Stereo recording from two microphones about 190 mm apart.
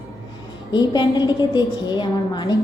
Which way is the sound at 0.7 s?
25° left (ahead or behind).